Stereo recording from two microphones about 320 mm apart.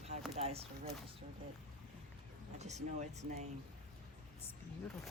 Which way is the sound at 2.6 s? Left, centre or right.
Right.